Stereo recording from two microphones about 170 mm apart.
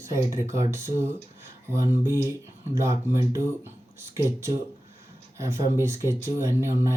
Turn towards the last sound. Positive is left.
turn(degrees=-15)  # may be behind; listen again after turning